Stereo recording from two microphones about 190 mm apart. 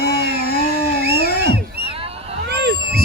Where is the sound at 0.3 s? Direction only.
55° left (ahead or behind).